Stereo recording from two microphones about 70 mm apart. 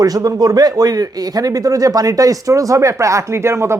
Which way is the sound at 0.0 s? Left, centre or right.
Right.